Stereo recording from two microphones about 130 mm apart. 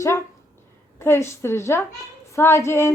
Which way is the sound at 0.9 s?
20° left (ahead or behind).